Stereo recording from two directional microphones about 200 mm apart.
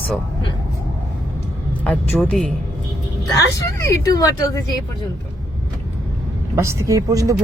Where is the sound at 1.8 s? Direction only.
5° left (ahead or behind).